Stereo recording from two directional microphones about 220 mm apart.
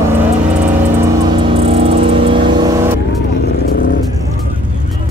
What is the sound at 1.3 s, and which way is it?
Vehicle, 25° right (ahead or behind).